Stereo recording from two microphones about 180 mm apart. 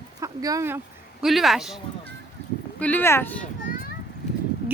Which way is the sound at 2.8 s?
10° left (ahead or behind).